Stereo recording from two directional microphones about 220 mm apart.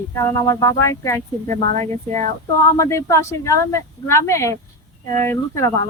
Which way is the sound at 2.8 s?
15° left (ahead or behind).